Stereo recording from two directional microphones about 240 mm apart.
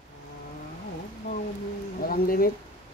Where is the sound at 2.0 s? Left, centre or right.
Left.